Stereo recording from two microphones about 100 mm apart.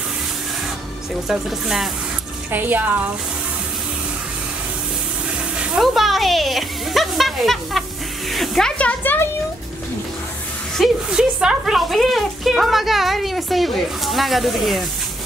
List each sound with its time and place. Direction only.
1.3 s speech: 5° right (ahead or behind)
2.5 s a woman's voice: 20° right (ahead or behind)
5.8 s speech: centre (ahead or behind); by 9.3 s 20° left (ahead or behind)
10.8 s speech: 5° right (ahead or behind)